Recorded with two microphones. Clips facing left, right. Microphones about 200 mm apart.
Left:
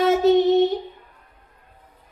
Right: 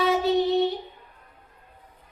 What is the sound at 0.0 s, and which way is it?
Child singing, 45° left (ahead or behind).